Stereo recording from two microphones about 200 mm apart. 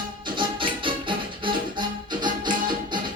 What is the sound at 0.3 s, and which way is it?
Music, 25° right (ahead or behind).